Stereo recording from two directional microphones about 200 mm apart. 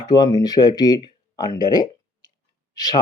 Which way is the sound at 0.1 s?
20° left (ahead or behind).